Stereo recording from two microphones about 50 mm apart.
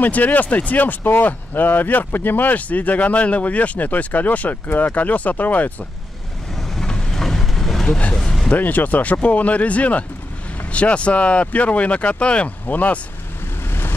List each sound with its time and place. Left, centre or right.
0.0 s speech: left
6.5 s vehicle: centre
7.8 s speech: centre
8.5 s speech: left
13.7 s vehicle: left